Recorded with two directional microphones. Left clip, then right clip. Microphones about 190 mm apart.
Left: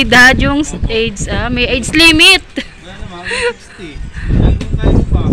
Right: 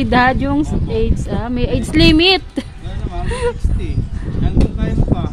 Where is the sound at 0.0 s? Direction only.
5° right (ahead or behind).